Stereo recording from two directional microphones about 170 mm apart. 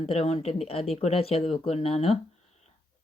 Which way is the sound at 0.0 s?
35° left (ahead or behind).